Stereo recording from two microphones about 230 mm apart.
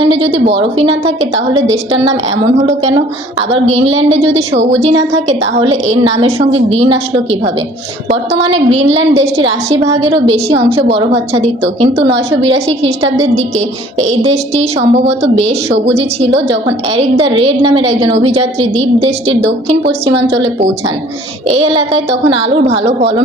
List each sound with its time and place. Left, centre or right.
0.0 s a sound: right
0.3 s a woman's voice: right
0.5 s a woman's voice: right
1.0 s a woman's voice: right
1.7 s a woman's voice: right
3.8 s a woman's voice: right
5.5 s a woman's voice: right
8.1 s a woman's voice: right
9.2 s a woman's voice: right
12.1 s a woman's voice: right
14.0 s a woman's voice: right
20.1 s a woman's voice: right
21.4 s a woman's voice: right